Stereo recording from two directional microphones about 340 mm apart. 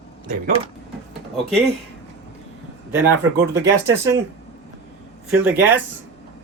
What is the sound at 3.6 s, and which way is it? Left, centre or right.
Speech, centre.